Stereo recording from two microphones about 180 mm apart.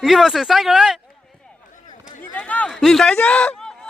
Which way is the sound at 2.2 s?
10° left (ahead or behind).